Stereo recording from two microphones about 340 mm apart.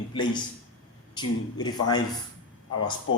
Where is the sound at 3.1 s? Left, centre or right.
Left.